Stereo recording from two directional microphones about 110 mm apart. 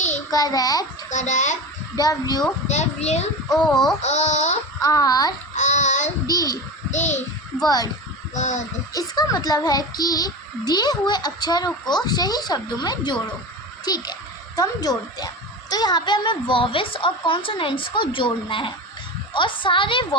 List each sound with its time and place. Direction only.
0.3 s a child's voice: 35° left (ahead or behind)
1.1 s a child's voice: 90° left
2.0 s a child's voice: 35° left (ahead or behind)
2.6 s a child's voice: 90° left
3.5 s speech: centre (ahead or behind)
4.0 s a child's voice: 90° left
4.8 s a child's voice: 35° left (ahead or behind)
5.5 s a sound: 90° left
6.2 s a child's voice: 35° left (ahead or behind)
6.9 s a child's voice: 90° left
7.6 s a child's voice: 35° left (ahead or behind)
8.4 s a child's voice: 90° left
8.9 s a child's voice: 35° left (ahead or behind)